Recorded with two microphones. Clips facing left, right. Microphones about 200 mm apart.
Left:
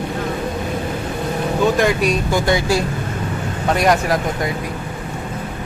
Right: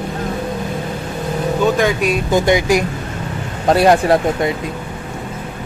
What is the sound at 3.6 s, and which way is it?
Speech, 30° right (ahead or behind).